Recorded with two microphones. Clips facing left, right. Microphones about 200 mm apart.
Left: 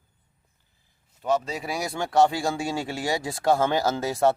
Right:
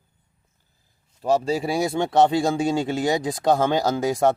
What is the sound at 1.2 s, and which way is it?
Speech, 30° right (ahead or behind).